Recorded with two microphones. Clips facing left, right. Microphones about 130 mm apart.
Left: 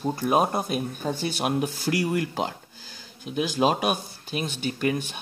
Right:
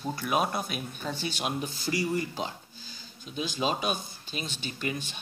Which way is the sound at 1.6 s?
65° left (ahead or behind).